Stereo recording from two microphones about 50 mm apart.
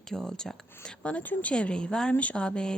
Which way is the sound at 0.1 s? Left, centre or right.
Centre.